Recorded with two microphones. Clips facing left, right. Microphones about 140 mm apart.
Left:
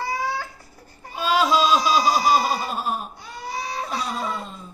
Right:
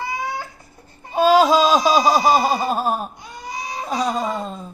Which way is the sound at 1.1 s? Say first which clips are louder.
Right 7 dB; 45° right (ahead or behind).